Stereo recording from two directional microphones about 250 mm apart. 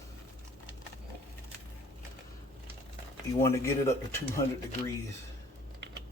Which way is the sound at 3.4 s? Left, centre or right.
Centre.